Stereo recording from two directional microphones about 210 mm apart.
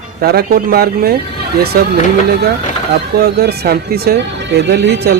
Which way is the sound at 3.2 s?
50° right (ahead or behind).